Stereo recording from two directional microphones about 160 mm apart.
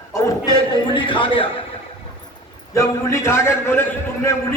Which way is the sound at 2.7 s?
20° left (ahead or behind).